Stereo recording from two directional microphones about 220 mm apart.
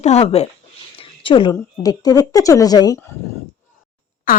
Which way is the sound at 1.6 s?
15° left (ahead or behind).